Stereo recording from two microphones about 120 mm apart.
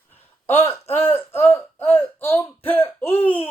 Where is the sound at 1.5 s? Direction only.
55° left (ahead or behind).